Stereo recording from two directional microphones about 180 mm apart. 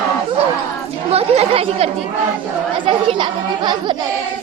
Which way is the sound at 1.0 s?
35° right (ahead or behind).